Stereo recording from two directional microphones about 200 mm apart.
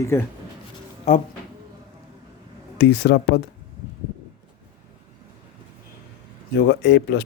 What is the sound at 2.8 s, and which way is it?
Speech, 55° left (ahead or behind).